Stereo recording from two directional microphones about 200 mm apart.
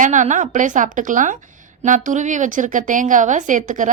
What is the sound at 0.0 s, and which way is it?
A woman's voice, 40° right (ahead or behind).